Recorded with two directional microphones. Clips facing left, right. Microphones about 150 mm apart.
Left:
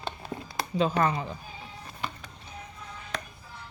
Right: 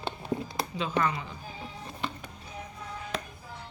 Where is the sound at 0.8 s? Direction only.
35° left (ahead or behind).